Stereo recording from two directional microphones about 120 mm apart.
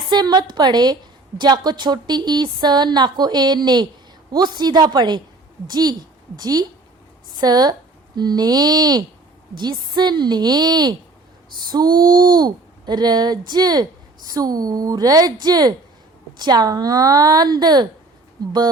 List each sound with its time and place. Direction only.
0.1 s a woman's voice: 35° right (ahead or behind)